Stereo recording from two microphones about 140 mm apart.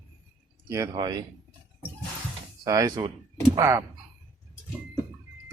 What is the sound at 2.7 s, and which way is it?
Speech, 25° right (ahead or behind).